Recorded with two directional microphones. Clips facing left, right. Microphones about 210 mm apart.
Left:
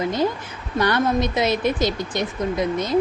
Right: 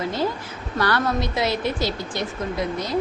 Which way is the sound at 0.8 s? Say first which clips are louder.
Left 3 dB; 20° left (ahead or behind).